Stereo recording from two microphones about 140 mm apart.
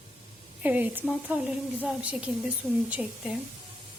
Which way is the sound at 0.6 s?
10° right (ahead or behind).